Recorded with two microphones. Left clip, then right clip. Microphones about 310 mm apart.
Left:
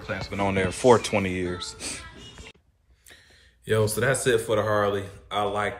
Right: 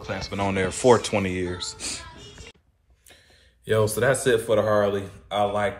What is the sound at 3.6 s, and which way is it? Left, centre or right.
Speech, centre.